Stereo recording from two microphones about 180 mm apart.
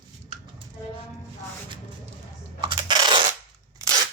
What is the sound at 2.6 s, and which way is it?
Coin, 25° right (ahead or behind).